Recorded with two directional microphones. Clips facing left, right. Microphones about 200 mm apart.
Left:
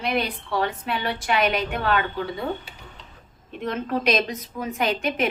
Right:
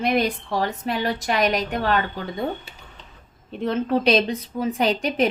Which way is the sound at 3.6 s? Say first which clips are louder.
Right 4 dB; 30° right (ahead or behind).